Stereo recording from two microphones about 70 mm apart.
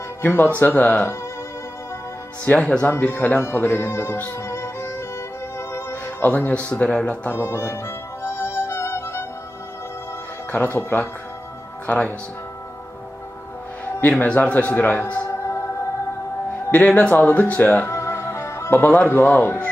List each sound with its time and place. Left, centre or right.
0.2 s a man's voice: left
2.6 s speech: centre
2.9 s a man's voice: left
4.4 s music: left
6.2 s a man's voice: left
7.3 s music: left
10.5 s a man's voice: left
14.0 s a man's voice: left
15.3 s music: left
16.7 s a man's voice: left
17.8 s music: left
18.9 s a man's voice: left